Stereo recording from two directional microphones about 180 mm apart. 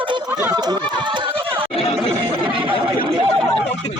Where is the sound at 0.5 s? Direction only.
25° right (ahead or behind).